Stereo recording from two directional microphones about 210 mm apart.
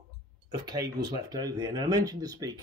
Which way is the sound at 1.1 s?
20° right (ahead or behind).